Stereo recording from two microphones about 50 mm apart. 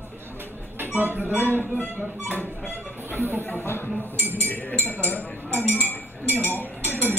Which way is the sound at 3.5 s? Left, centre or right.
Left.